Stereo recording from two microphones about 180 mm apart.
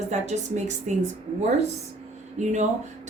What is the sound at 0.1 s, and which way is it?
Speech, 40° right (ahead or behind).